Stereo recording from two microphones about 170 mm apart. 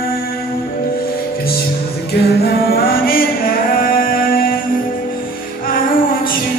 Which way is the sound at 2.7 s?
60° left (ahead or behind).